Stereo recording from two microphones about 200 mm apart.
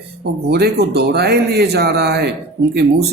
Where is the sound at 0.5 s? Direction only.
55° right (ahead or behind).